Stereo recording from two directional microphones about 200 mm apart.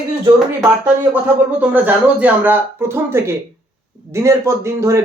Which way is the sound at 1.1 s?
10° right (ahead or behind).